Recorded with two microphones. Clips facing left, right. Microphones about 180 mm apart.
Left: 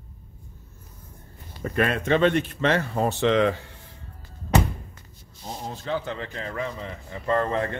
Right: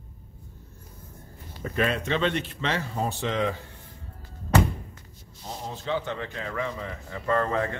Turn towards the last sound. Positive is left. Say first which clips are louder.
# left 1 dB
turn(degrees=25)  # may be behind; listen again after turning